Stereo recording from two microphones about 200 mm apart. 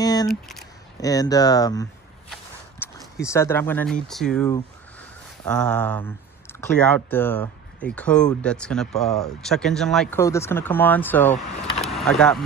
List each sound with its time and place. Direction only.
0.0 s a sound: 20° left (ahead or behind)
0.3 s speech: centre (ahead or behind)
0.9 s speech: 20° left (ahead or behind)
3.3 s speech: 15° left (ahead or behind)
5.5 s speech: 5° left (ahead or behind)
10.2 s speech: 15° left (ahead or behind)
11.8 s vehicle: centre (ahead or behind)